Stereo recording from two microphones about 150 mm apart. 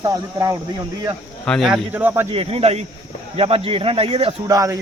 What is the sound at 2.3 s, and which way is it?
Speech, 40° right (ahead or behind).